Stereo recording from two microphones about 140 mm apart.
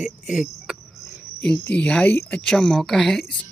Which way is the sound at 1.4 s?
10° left (ahead or behind).